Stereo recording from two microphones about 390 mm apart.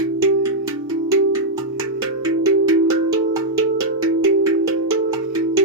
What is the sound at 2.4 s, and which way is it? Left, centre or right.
Music, right.